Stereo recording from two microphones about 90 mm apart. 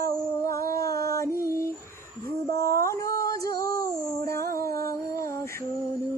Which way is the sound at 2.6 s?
35° left (ahead or behind).